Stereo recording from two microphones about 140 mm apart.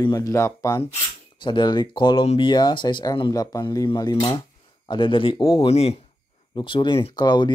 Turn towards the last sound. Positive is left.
turn(degrees=30)  # may be behind; listen again after turning